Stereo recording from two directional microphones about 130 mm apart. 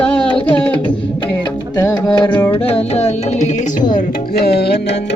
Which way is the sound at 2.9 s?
55° left (ahead or behind).